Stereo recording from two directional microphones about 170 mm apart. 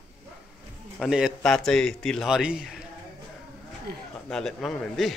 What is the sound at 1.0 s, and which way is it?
A man's voice, 5° right (ahead or behind).